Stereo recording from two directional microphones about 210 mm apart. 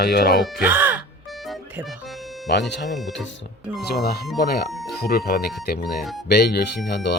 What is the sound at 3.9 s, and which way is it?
Speech, 50° left (ahead or behind).